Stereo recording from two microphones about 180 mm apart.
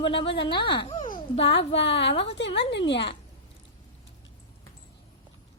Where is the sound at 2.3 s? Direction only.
80° left.